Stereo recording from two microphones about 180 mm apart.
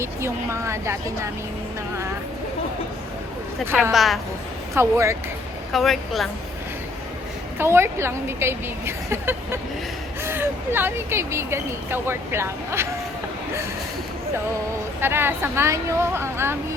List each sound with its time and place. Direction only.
0.0 s speech: 15° right (ahead or behind)
3.9 s a woman's voice: centre (ahead or behind)
4.7 s speech: 15° right (ahead or behind)
5.7 s a woman's voice: centre (ahead or behind)
7.6 s speech: 15° right (ahead or behind)
15.0 s speech: 10° right (ahead or behind)